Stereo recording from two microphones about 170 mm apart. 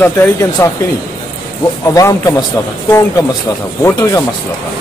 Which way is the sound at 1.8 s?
20° left (ahead or behind).